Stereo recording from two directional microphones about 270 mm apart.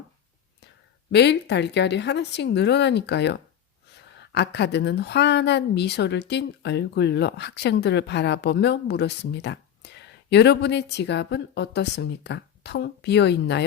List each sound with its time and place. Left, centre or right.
1.1 s a woman's voice: left